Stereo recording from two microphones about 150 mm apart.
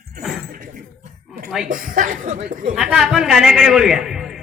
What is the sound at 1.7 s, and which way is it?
A woman's voice, 65° right (ahead or behind).